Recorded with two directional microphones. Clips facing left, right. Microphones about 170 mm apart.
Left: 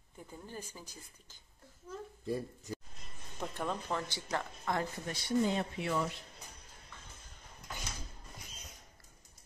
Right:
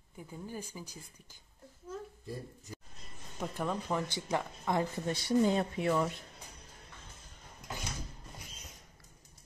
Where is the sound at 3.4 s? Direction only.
10° right (ahead or behind).